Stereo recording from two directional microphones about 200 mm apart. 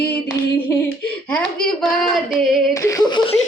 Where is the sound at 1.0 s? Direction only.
5° left (ahead or behind).